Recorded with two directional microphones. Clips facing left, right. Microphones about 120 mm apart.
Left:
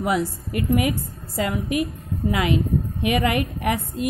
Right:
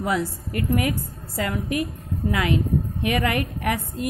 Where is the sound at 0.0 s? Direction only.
15° left (ahead or behind).